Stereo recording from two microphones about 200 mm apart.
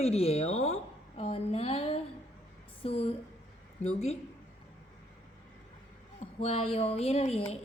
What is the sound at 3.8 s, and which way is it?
Speech, 30° left (ahead or behind).